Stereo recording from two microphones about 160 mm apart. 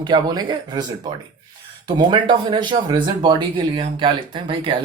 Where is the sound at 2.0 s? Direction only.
30° right (ahead or behind).